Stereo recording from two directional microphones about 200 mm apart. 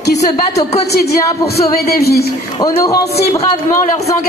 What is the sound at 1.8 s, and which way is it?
Speech, 50° left (ahead or behind).